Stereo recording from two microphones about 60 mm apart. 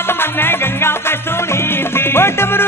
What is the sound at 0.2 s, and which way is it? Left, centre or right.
Music, left.